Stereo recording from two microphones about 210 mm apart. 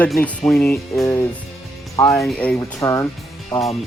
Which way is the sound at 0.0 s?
5° left (ahead or behind).